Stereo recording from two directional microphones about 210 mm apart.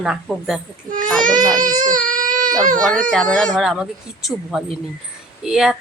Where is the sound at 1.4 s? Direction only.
20° right (ahead or behind).